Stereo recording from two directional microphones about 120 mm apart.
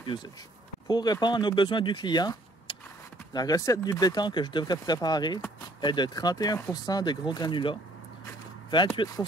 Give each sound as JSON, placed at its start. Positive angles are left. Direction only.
{"t": 0.8, "sound": "speech", "side_deg": 35}
{"t": 3.3, "sound": "speech", "side_deg": 30}
{"t": 8.9, "sound": "speech", "side_deg": 35}